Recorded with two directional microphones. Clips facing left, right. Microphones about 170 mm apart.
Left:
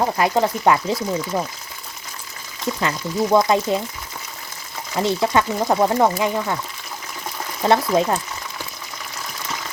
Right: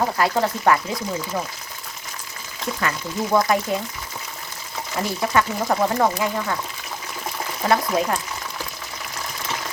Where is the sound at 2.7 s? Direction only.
20° left (ahead or behind).